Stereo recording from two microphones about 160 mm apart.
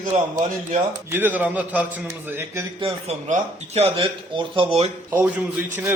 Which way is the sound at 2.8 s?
45° right (ahead or behind).